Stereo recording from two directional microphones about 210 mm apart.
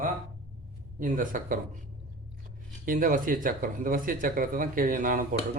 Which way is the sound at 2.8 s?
40° right (ahead or behind).